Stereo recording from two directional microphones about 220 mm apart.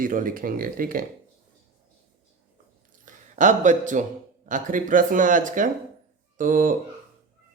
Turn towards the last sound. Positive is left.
turn(degrees=-35)  # may be behind; listen again after turning